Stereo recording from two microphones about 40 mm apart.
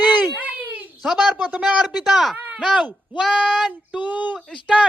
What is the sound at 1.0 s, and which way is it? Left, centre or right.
Speech, centre.